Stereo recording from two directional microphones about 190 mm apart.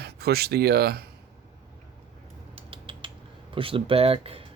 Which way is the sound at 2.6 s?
30° right (ahead or behind).